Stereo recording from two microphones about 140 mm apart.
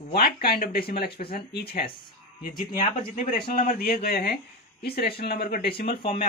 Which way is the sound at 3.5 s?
90° left.